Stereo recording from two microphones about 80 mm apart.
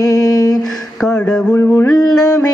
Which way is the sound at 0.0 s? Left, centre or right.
Left.